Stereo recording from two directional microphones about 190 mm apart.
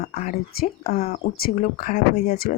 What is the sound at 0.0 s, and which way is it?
Speech, 40° left (ahead or behind).